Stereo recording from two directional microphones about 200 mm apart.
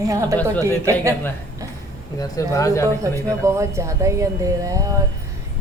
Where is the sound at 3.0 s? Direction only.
15° right (ahead or behind).